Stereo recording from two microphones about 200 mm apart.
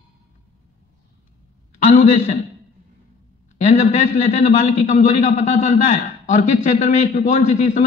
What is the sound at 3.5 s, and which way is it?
A man's voice, 35° left (ahead or behind).